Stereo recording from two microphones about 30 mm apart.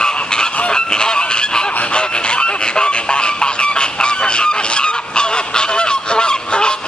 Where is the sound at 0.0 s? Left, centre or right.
Left.